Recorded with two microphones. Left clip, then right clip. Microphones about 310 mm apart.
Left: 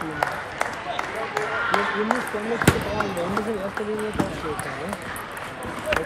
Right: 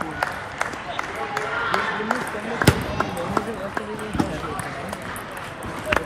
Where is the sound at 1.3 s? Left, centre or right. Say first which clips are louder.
Even; left.